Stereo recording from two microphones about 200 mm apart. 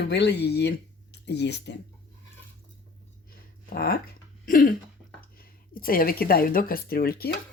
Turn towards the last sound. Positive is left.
turn(degrees=50)  # may be behind; listen again after turning